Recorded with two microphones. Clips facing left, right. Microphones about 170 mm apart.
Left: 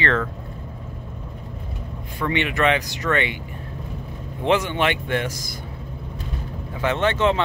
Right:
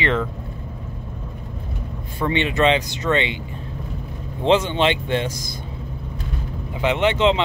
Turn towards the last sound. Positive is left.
turn(degrees=-20)  # may be behind; listen again after turning